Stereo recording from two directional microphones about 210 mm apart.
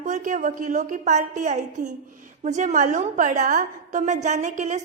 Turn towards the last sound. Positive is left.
turn(degrees=-35)  # may be behind; listen again after turning